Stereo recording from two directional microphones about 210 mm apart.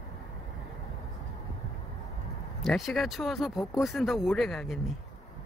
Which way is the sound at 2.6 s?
Centre (ahead or behind).